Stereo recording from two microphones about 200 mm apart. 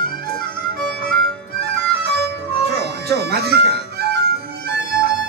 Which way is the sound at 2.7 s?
55° right (ahead or behind).